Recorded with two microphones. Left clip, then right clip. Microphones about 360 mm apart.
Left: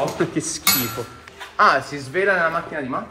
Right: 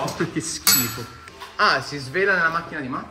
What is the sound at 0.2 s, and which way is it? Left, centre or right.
Speech, centre.